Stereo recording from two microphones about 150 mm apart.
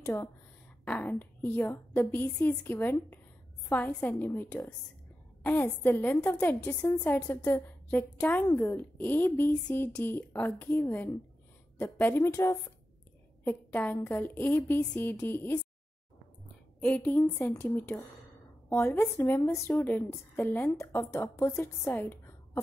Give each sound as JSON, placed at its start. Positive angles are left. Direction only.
{"t": 0.0, "sound": "a woman's voice", "side_deg": 10}
{"t": 16.8, "sound": "a woman's voice", "side_deg": 10}